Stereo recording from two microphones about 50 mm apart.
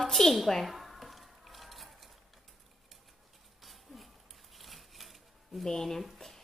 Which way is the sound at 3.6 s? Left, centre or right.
Centre.